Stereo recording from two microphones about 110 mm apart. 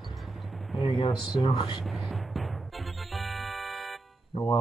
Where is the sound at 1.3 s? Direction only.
50° left (ahead or behind).